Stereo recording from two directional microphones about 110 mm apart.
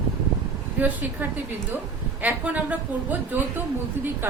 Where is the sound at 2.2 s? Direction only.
15° right (ahead or behind).